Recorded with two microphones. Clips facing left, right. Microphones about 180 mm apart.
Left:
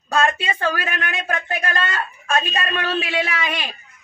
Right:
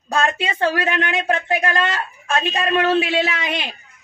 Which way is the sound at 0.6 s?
25° right (ahead or behind).